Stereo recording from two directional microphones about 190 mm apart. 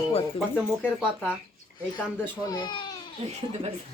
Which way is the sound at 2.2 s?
20° left (ahead or behind).